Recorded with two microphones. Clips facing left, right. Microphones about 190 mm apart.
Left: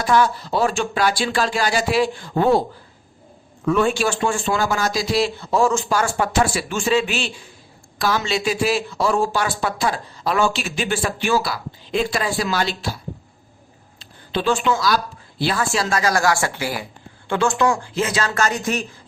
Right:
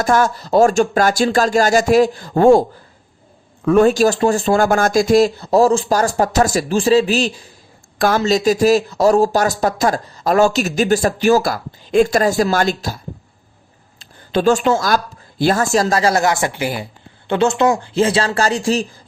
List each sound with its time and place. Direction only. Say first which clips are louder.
0.0 s speech: right 2 dB; 45° right (ahead or behind)
3.7 s speech: right 7 dB; 40° right (ahead or behind)
4.6 s speech: right 7 dB; 50° right (ahead or behind)
7.9 s speech: right 6 dB; 50° right (ahead or behind)
14.0 s speech: right 7 dB; 45° right (ahead or behind)